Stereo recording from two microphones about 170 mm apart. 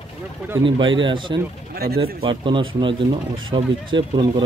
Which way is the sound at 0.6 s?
30° right (ahead or behind).